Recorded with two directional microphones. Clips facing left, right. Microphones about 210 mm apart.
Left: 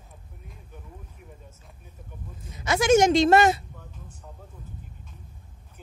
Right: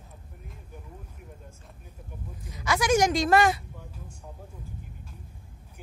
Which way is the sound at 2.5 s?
25° left (ahead or behind).